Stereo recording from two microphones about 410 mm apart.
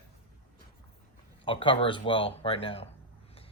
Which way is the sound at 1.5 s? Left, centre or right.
Centre.